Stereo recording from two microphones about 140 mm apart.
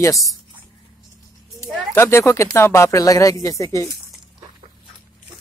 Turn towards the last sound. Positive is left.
turn(degrees=20)  # may be behind; listen again after turning